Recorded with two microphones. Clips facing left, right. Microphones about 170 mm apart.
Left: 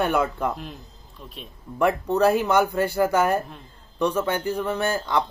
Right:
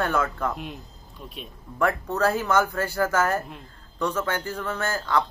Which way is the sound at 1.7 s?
15° left (ahead or behind).